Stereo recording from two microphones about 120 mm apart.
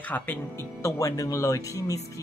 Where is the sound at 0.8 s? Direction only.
25° left (ahead or behind).